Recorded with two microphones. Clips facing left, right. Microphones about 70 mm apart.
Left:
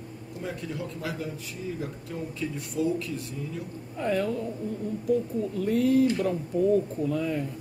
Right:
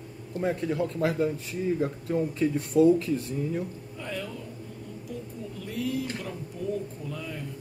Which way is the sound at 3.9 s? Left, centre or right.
Left.